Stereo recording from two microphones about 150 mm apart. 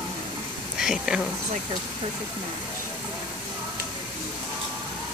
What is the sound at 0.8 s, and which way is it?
Speech, 5° right (ahead or behind).